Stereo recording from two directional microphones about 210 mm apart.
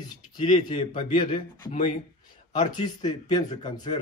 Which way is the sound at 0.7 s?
20° left (ahead or behind).